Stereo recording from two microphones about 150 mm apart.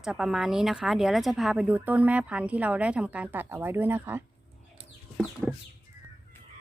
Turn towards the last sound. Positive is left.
turn(degrees=-5)  # may be behind; listen again after turning